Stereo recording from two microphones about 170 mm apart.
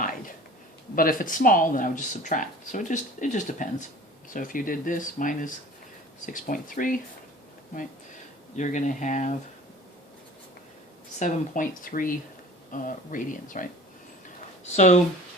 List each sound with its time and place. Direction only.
0.9 s speech: 55° left (ahead or behind)
8.5 s speech: 45° left (ahead or behind)
11.2 s speech: 50° left (ahead or behind)
14.8 s speech: 45° left (ahead or behind)